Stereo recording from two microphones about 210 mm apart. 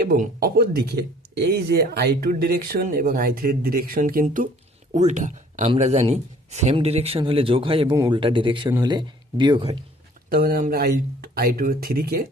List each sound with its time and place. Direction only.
0.0 s speech: 45° right (ahead or behind); by 9.7 s 20° right (ahead or behind)
10.2 s speech: 45° right (ahead or behind)